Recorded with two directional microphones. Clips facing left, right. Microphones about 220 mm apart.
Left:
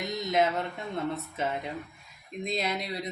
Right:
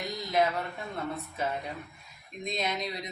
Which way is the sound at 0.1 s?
20° left (ahead or behind).